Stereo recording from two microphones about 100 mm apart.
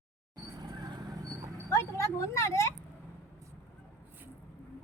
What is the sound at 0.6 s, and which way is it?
Vehicle, 45° right (ahead or behind).